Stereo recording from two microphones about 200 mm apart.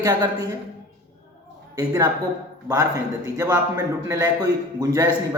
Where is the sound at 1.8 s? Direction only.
20° right (ahead or behind).